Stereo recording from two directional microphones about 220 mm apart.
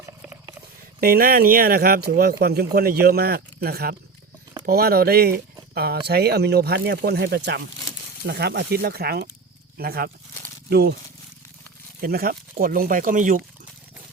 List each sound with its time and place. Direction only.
1.0 s speech: 40° right (ahead or behind)
11.9 s speech: 40° right (ahead or behind)